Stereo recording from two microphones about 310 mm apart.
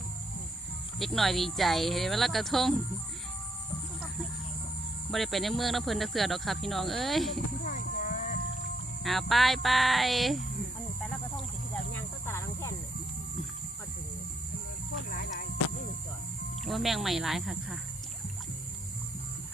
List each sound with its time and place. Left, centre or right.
0.9 s speech: centre
5.1 s speech: centre
7.6 s a sound: left
9.0 s speech: centre
11.9 s snake: centre
15.1 s a sound: left
16.6 s speech: centre